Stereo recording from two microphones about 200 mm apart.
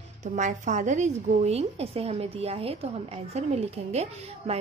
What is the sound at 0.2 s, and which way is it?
A woman's voice, 35° right (ahead or behind).